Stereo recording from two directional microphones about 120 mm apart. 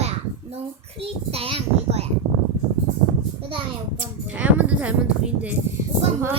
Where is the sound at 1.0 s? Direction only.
55° right (ahead or behind).